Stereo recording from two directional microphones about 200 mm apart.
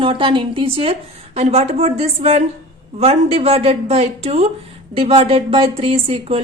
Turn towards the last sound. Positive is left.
turn(degrees=-30)  # may be behind; listen again after turning